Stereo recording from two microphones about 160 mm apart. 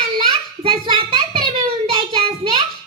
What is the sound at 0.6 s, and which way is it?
Child singing, 30° right (ahead or behind).